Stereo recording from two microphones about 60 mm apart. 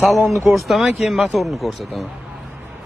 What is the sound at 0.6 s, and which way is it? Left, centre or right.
Speech, centre.